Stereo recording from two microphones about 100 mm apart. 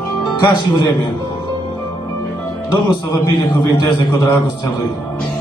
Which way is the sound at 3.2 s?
45° left (ahead or behind).